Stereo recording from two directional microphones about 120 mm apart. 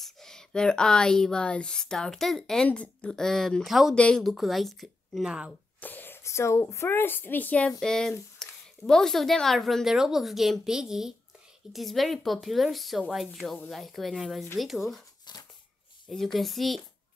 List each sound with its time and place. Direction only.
0.0 s speech: 5° left (ahead or behind)
5.8 s speech: 15° left (ahead or behind); by 15.0 s centre (ahead or behind)
15.3 s a sound: 40° left (ahead or behind)
16.3 s speech: centre (ahead or behind)